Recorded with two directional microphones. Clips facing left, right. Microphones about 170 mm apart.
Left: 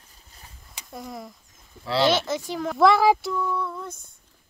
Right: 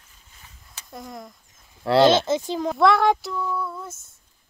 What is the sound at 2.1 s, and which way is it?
Speech, 20° right (ahead or behind).